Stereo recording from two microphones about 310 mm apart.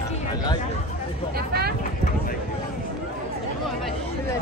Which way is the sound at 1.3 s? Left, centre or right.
Right.